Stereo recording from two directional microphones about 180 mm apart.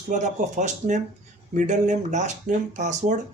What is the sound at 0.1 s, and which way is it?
Speech, 45° right (ahead or behind).